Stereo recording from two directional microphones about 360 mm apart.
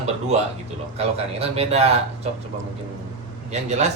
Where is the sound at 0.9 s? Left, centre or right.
Centre.